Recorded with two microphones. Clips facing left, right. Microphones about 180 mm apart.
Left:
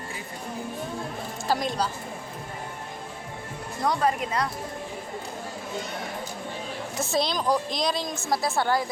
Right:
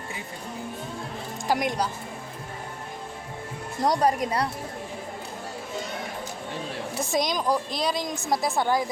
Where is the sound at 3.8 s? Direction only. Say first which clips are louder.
Right 2 dB; 40° right (ahead or behind).